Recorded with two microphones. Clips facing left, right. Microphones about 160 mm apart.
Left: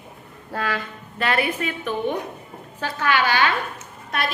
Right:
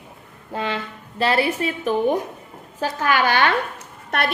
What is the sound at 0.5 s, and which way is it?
A woman's voice, 25° right (ahead or behind).